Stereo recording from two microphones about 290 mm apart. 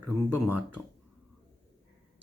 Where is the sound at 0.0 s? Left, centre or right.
Right.